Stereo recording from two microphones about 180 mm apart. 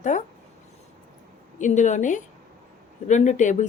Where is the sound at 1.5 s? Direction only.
45° left (ahead or behind).